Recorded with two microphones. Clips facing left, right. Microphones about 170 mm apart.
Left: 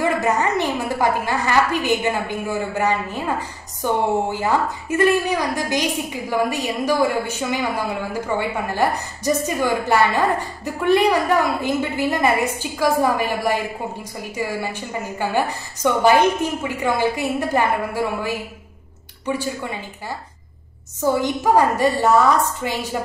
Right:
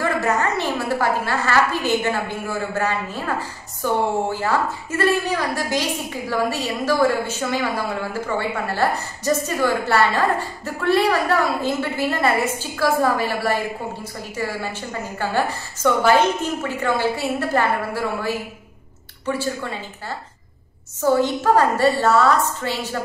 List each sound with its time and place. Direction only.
0.0 s a woman's voice: 15° left (ahead or behind)